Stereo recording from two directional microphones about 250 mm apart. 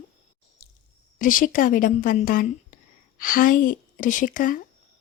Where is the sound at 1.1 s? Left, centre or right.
Left.